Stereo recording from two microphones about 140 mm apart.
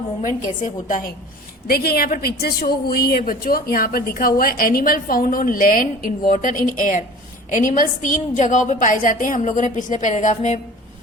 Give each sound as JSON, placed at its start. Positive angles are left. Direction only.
{"t": 0.2, "sound": "a woman's voice", "side_deg": 65}
{"t": 1.6, "sound": "a woman's voice", "side_deg": 90}